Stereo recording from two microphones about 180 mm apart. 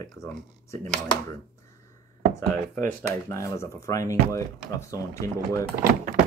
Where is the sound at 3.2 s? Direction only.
15° left (ahead or behind).